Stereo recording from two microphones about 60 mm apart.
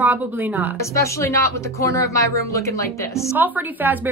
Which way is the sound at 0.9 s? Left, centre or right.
Left.